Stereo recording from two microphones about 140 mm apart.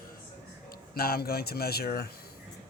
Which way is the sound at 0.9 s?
90° left.